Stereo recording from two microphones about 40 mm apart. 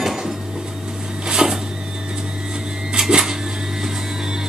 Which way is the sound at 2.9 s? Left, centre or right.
Centre.